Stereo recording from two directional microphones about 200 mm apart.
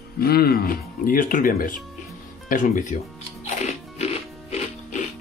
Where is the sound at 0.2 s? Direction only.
50° left (ahead or behind).